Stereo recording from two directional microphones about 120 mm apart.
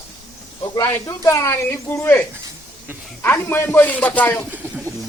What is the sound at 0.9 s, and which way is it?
Speech, 25° left (ahead or behind).